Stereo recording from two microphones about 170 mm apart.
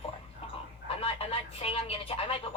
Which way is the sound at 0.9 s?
35° left (ahead or behind).